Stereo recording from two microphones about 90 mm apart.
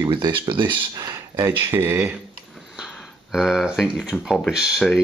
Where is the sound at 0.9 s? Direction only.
50° right (ahead or behind).